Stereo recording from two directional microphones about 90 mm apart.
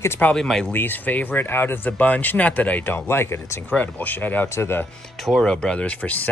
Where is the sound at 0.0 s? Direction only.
30° left (ahead or behind).